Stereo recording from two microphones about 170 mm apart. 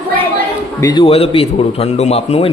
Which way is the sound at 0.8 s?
30° left (ahead or behind).